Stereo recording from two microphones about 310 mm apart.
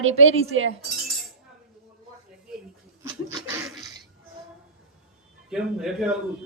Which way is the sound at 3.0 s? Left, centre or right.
Centre.